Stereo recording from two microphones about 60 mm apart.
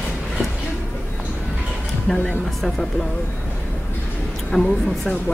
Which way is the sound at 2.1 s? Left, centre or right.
Centre.